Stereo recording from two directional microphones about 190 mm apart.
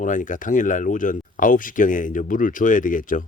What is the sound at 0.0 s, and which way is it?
Speech, 40° left (ahead or behind).